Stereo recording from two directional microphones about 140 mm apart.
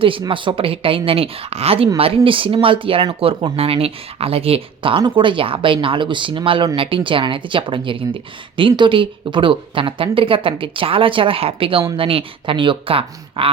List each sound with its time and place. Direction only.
0.0 s speech: 40° right (ahead or behind)